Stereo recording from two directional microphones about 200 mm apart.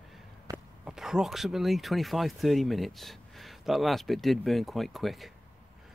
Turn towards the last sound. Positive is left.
turn(degrees=0)  # may be behind; listen again after turning